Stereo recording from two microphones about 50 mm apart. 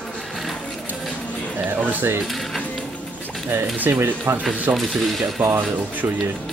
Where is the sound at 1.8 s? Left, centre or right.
Right.